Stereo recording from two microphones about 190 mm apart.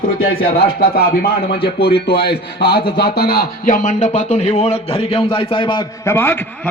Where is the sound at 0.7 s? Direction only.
55° left (ahead or behind).